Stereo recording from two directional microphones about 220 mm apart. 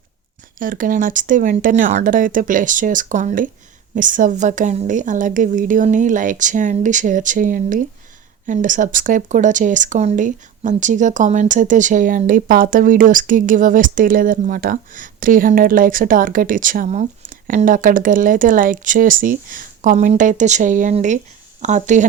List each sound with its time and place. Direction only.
0.6 s speech: 40° right (ahead or behind)